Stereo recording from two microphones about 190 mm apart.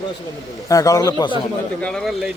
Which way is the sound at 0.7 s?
15° left (ahead or behind).